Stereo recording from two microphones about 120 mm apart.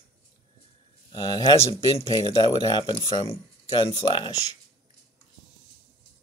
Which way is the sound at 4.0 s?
45° left (ahead or behind).